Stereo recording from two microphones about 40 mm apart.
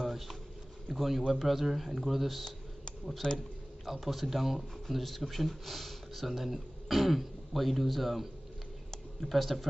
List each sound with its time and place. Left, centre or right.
0.0 s a sound: centre
0.9 s speech: centre
3.2 s a man's voice: left
3.8 s speech: centre